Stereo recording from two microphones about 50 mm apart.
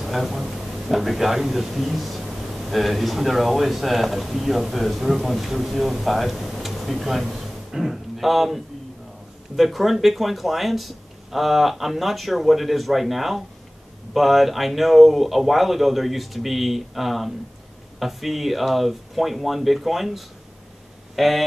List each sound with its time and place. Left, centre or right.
0.0 s a man's voice: centre
9.6 s speech: centre